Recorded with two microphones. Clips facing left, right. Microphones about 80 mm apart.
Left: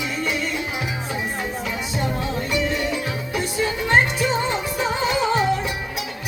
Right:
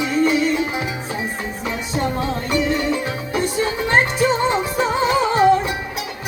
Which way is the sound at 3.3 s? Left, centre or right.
Right.